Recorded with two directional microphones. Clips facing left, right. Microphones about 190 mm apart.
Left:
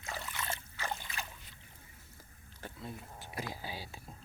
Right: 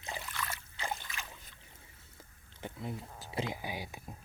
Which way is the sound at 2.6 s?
20° right (ahead or behind).